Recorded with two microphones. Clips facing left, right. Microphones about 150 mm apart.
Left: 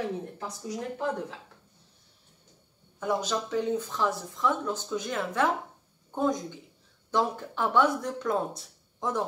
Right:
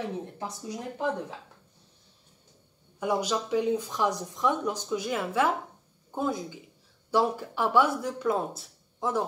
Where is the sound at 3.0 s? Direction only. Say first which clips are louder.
Right 1 dB; 10° right (ahead or behind).